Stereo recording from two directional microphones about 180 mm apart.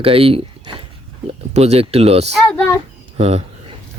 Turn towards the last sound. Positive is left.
turn(degrees=-35)  # may be behind; listen again after turning